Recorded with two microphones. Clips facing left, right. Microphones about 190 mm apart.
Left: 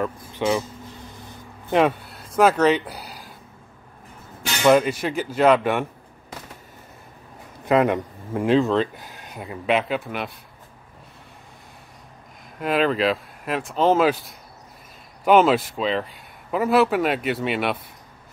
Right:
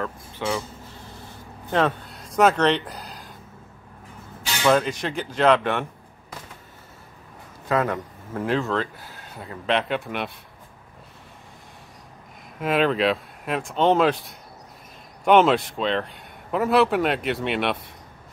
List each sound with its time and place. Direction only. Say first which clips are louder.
0.0 s speech: left 5 dB; 20° left (ahead or behind)
1.7 s speech: left 3 dB; 15° left (ahead or behind)
2.1 s speech: left 1 dB; centre (ahead or behind)
4.6 s speech: left 3 dB; 10° left (ahead or behind)
7.6 s speech: left 5 dB; 20° left (ahead or behind); by 10.3 s centre (ahead or behind)
12.5 s a man's voice: even; centre (ahead or behind)